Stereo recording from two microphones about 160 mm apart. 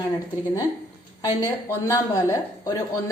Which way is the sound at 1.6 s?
20° left (ahead or behind).